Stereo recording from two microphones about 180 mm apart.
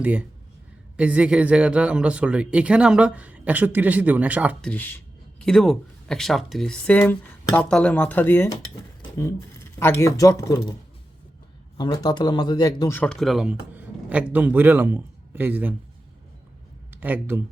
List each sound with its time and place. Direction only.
0.0 s speech: 10° right (ahead or behind)
4.6 s speech: 10° left (ahead or behind)
9.0 s a sound: 20° left (ahead or behind)
9.7 s speech: 15° left (ahead or behind)
11.8 s speech: 25° left (ahead or behind)
13.0 s speech: 5° left (ahead or behind)
16.9 s speech: 10° right (ahead or behind)